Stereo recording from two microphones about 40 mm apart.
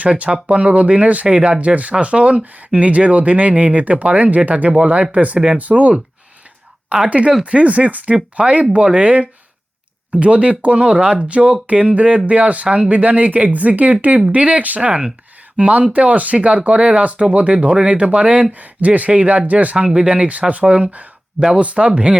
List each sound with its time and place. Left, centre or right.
0.0 s speech: right
6.9 s speech: right
12.6 s speech: right
12.9 s speech: right
19.7 s speech: right
20.9 s a sound: right
21.5 s speech: right